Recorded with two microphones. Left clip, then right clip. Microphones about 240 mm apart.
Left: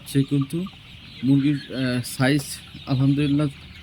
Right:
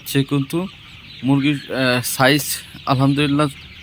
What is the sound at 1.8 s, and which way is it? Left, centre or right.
Speech, centre.